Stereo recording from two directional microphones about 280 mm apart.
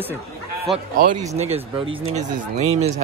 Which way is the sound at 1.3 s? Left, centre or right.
Right.